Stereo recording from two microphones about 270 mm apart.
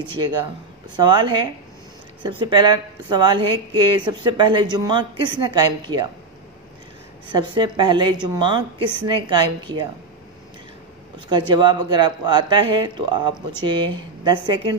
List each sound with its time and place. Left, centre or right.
0.9 s a woman's voice: centre
7.2 s a woman's voice: centre
11.2 s a woman's voice: centre